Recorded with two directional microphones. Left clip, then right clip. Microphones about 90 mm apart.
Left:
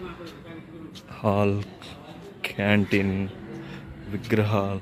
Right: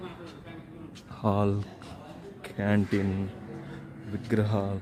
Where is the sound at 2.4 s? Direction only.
5° left (ahead or behind).